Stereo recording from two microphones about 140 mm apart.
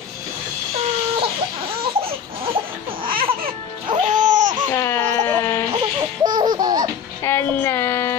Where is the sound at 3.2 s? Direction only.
40° right (ahead or behind).